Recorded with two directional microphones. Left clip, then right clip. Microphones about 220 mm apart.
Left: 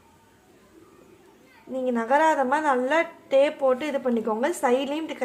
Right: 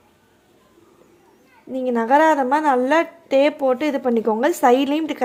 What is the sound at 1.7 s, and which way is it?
A woman's voice, 35° right (ahead or behind).